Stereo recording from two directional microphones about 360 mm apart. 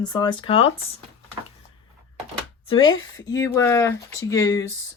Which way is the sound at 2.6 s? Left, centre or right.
Centre.